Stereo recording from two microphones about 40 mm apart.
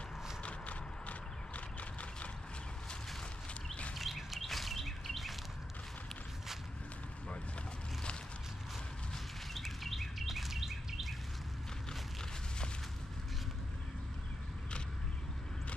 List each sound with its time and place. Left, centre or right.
0.4 s horse: left
3.9 s bird: centre
9.5 s bird vocalization: centre